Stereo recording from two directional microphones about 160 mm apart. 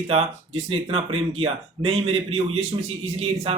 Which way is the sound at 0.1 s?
40° right (ahead or behind).